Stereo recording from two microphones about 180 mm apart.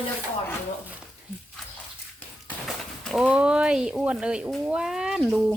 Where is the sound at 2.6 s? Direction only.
Centre (ahead or behind).